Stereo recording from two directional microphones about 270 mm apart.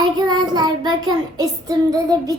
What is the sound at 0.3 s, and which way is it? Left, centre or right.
Child singing, centre.